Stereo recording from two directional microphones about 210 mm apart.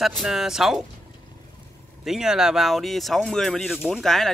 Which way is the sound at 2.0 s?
Centre (ahead or behind).